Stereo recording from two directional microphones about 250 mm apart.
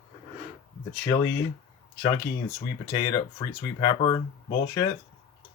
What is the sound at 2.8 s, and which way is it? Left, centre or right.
Speech, centre.